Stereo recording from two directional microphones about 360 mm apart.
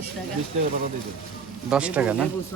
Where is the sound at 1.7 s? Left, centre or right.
Centre.